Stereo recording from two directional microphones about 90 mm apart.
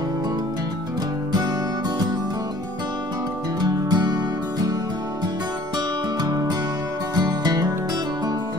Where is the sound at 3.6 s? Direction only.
45° right (ahead or behind).